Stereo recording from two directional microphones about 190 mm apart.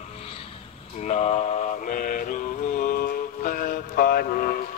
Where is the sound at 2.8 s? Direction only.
50° left (ahead or behind).